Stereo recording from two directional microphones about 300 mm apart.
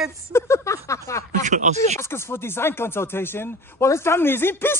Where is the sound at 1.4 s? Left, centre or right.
Right.